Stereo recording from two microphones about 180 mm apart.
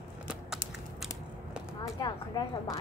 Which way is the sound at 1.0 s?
Centre (ahead or behind).